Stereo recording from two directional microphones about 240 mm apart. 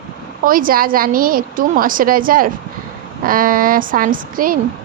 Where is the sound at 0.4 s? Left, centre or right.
Right.